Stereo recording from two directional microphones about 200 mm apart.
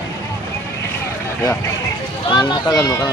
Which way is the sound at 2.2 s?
20° left (ahead or behind).